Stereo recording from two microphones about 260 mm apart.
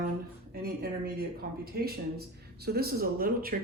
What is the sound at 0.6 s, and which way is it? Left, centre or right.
Speech, right.